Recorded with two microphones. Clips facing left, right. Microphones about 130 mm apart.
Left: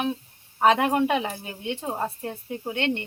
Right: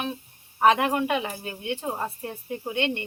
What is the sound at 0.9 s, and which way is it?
Speech, 25° left (ahead or behind).